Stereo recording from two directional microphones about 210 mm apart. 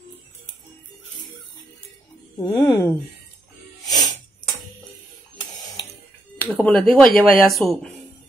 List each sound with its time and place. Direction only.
2.3 s speech: 15° left (ahead or behind)
3.8 s music: 20° left (ahead or behind)
6.3 s speech: 10° left (ahead or behind)